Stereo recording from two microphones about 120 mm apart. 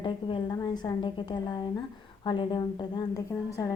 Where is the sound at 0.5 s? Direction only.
30° left (ahead or behind).